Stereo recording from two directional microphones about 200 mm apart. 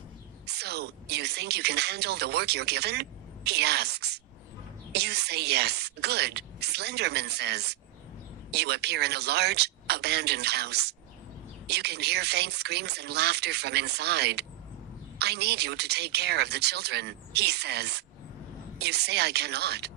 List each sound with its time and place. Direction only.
0.4 s speech: 55° right (ahead or behind)